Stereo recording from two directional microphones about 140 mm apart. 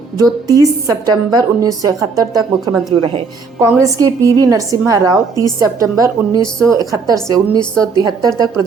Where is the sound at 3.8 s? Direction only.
25° right (ahead or behind).